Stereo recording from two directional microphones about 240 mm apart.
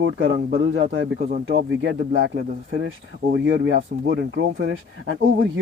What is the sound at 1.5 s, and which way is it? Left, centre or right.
Speech, right.